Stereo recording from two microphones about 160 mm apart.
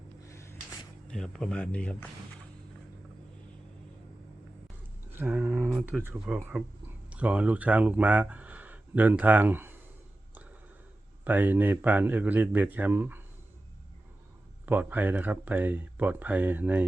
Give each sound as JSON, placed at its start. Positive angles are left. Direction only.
{"t": 0.3, "sound": "a sound", "side_deg": 20}
{"t": 1.0, "sound": "speech", "side_deg": 5}
{"t": 5.1, "sound": "speech", "side_deg": -10}
{"t": 11.3, "sound": "speech", "side_deg": -10}
{"t": 14.7, "sound": "speech", "side_deg": -10}